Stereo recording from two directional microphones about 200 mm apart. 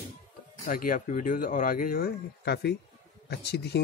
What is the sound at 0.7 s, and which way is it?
Speech, 45° left (ahead or behind).